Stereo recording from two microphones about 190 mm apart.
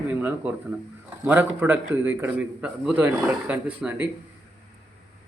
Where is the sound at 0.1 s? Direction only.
10° right (ahead or behind).